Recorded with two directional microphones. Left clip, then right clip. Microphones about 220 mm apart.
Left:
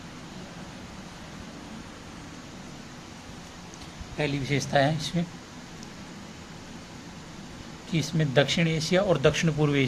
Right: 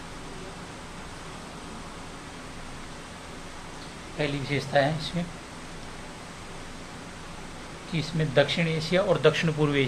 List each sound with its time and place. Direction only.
4.2 s speech: 35° left (ahead or behind)
7.9 s speech: 35° left (ahead or behind)